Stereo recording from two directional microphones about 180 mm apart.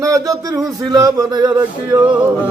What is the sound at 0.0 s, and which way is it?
A man's voice, 20° right (ahead or behind).